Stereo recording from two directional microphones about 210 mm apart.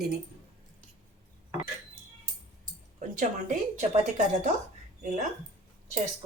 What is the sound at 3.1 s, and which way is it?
Speech, 35° right (ahead or behind).